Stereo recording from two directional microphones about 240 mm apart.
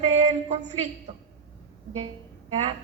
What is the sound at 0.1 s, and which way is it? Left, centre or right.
A woman's voice, right.